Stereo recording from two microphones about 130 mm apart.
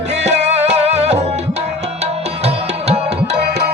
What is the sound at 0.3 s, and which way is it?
Music, 60° right (ahead or behind).